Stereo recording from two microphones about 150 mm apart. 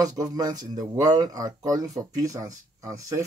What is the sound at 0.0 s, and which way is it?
Speech, 25° right (ahead or behind).